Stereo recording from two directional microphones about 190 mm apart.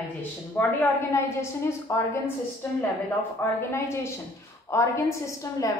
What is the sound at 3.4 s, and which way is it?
A woman's voice, 10° left (ahead or behind).